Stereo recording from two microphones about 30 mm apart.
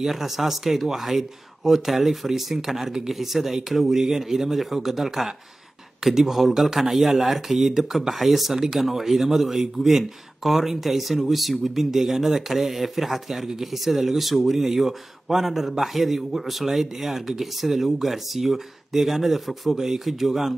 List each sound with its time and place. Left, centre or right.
0.0 s speech: centre